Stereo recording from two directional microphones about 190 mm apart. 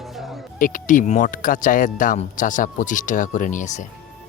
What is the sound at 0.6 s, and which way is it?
Speech, 45° left (ahead or behind).